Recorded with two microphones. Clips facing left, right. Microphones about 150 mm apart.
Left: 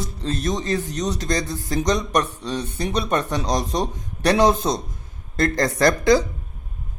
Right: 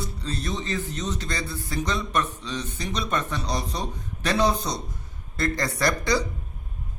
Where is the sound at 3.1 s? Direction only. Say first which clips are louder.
Left 5 dB; 80° left.